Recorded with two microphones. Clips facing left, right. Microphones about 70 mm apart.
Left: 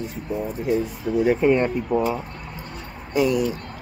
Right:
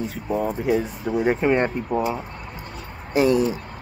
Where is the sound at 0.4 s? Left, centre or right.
Right.